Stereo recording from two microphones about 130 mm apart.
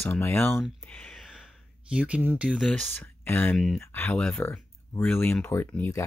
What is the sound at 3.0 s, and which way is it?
Speech, 15° left (ahead or behind).